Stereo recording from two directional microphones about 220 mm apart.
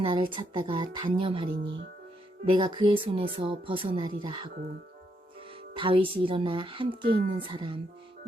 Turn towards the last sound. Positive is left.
turn(degrees=-20)  # may be behind; listen again after turning